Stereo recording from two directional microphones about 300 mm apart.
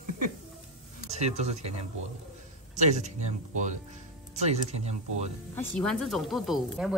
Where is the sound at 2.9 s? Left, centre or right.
Right.